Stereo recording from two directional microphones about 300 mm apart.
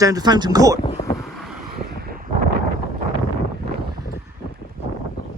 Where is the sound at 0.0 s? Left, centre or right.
Centre.